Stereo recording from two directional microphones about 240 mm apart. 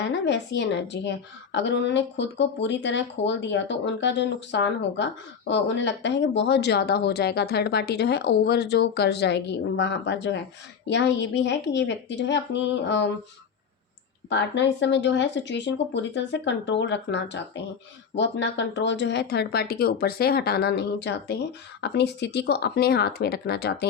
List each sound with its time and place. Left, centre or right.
0.0 s speech: left
14.3 s speech: left